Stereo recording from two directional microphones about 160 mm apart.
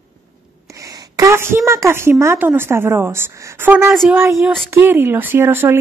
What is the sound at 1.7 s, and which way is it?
A woman's voice, 15° right (ahead or behind).